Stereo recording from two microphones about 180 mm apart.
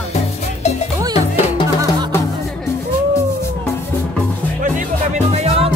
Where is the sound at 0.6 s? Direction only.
35° left (ahead or behind).